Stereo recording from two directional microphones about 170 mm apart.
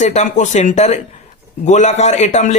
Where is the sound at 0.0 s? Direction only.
45° left (ahead or behind).